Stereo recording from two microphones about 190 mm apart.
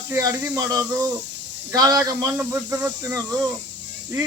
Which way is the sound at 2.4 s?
10° right (ahead or behind).